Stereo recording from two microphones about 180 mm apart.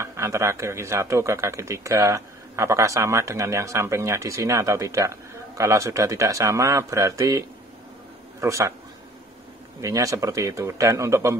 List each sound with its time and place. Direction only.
0.0 s speech: 15° right (ahead or behind)
9.8 s speech: 20° right (ahead or behind)